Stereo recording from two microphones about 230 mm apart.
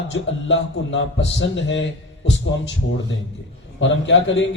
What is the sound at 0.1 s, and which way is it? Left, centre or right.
A man's voice, left.